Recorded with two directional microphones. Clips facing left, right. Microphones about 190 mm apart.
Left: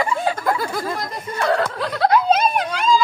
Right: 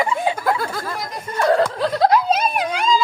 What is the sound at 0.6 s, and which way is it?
Speech, 10° left (ahead or behind).